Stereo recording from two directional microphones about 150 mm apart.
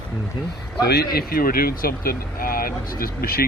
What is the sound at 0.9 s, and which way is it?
Speech, 90° left.